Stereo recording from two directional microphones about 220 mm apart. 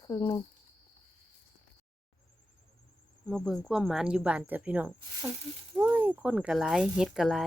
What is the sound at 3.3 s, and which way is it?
Speech, 5° left (ahead or behind).